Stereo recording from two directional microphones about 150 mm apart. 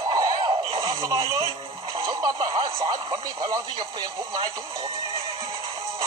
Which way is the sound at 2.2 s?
30° right (ahead or behind).